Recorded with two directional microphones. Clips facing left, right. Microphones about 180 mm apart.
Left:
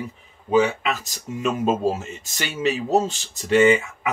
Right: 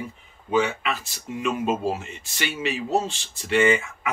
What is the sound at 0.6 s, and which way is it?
Speech, 40° left (ahead or behind).